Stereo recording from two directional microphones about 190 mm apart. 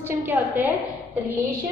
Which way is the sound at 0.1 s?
10° right (ahead or behind).